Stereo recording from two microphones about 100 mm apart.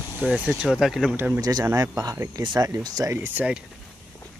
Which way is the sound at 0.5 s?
5° right (ahead or behind).